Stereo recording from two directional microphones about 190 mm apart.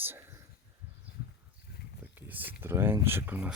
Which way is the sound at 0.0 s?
10° right (ahead or behind).